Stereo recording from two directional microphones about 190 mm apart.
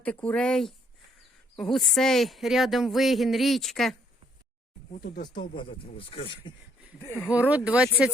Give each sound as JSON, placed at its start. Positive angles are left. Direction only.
{"t": 0.0, "sound": "speech", "side_deg": 5}
{"t": 4.9, "sound": "speech", "side_deg": 55}
{"t": 5.3, "sound": "speech", "side_deg": 25}
{"t": 7.0, "sound": "speech", "side_deg": 15}
{"t": 7.3, "sound": "speech", "side_deg": -10}